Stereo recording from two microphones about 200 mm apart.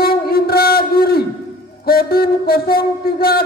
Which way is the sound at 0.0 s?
50° left (ahead or behind).